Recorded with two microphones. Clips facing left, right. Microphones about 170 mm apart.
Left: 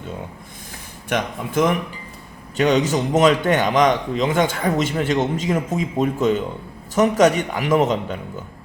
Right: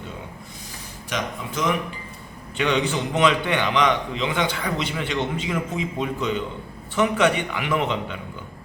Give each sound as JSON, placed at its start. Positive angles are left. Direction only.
{"t": 1.1, "sound": "a man's voice", "side_deg": 50}
{"t": 2.6, "sound": "a man's voice", "side_deg": 40}